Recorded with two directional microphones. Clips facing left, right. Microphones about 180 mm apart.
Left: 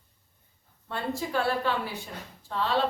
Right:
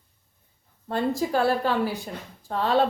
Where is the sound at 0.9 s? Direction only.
40° right (ahead or behind).